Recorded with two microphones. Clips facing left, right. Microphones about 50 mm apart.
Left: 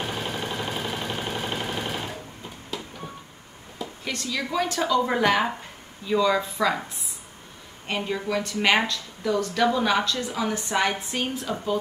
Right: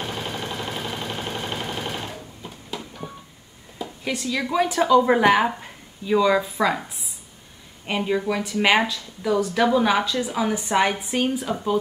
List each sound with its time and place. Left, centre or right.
0.0 s a sound: centre
2.4 s train: centre
3.7 s speech: centre
7.8 s a woman's voice: centre